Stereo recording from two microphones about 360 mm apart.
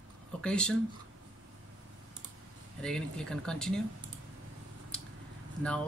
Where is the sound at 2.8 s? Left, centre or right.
Centre.